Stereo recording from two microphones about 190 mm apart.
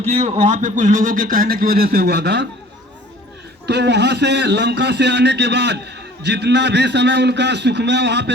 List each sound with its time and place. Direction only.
0.1 s a man's voice: 35° right (ahead or behind); by 2.5 s 60° right (ahead or behind)
3.7 s a man's voice: 65° right (ahead or behind)